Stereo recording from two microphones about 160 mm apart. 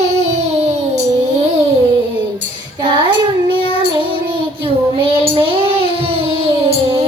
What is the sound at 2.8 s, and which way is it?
Child singing, 30° right (ahead or behind).